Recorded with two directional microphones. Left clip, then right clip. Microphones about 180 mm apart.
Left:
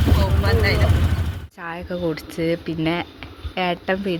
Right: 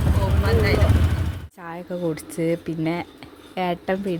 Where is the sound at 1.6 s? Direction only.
10° right (ahead or behind).